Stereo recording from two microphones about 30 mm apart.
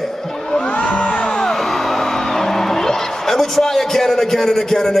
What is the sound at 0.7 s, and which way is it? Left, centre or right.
Music, left.